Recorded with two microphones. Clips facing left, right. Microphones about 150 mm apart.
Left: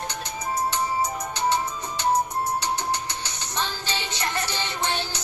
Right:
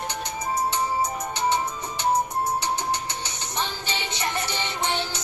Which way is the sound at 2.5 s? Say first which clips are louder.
Even; 20° right (ahead or behind).